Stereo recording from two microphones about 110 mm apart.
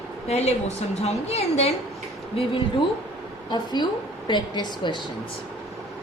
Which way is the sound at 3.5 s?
40° left (ahead or behind).